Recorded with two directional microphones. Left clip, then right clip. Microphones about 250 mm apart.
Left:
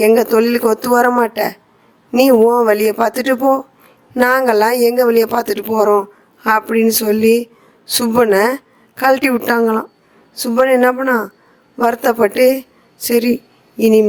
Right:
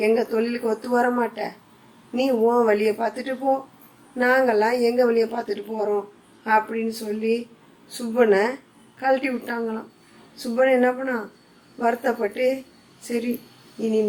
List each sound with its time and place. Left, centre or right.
0.0 s speech: left